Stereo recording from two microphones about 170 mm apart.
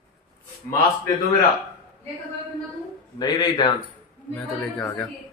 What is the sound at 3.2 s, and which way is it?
Speech, 25° left (ahead or behind).